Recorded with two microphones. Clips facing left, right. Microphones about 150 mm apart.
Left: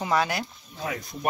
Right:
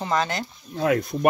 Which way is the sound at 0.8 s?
65° right (ahead or behind).